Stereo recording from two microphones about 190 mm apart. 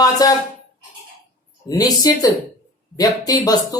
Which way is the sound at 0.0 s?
20° left (ahead or behind).